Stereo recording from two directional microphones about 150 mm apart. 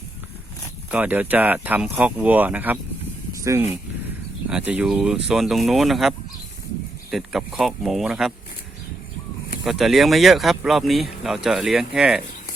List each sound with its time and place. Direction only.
0.9 s speech: 10° right (ahead or behind)
4.4 s speech: 10° right (ahead or behind)
9.6 s speech: centre (ahead or behind)